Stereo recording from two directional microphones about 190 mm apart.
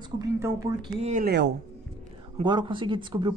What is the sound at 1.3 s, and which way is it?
Speech, 65° right (ahead or behind).